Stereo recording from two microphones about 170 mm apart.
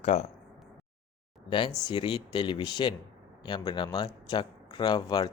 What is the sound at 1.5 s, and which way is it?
Speech, 30° left (ahead or behind).